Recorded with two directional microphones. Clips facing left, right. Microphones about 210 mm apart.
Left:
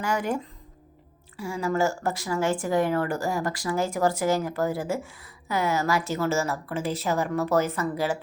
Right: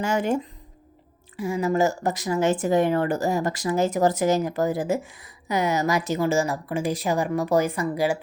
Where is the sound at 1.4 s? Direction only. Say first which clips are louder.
Right 3 dB; 20° right (ahead or behind).